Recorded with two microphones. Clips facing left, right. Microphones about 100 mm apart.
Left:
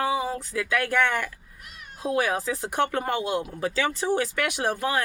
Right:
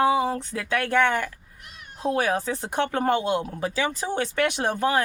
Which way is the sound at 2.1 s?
35° right (ahead or behind).